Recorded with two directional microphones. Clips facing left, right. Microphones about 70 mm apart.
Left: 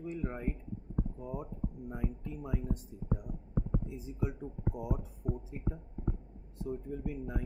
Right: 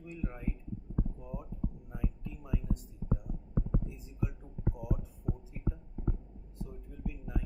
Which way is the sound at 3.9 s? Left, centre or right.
Left.